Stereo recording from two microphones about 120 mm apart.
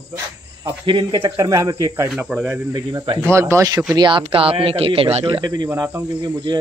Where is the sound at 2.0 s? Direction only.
5° right (ahead or behind).